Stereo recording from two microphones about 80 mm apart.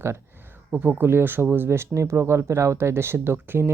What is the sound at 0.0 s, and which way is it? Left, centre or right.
Speech, right.